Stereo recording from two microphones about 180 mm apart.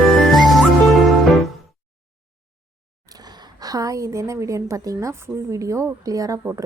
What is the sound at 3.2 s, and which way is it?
A woman's voice, 20° right (ahead or behind).